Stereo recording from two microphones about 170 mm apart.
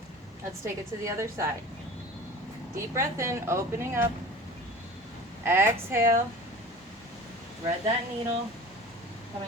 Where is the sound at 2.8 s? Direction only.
15° right (ahead or behind).